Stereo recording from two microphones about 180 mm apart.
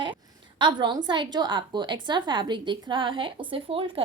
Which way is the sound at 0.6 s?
25° right (ahead or behind).